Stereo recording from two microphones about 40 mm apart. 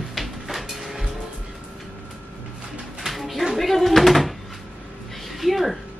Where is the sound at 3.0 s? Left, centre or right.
Centre.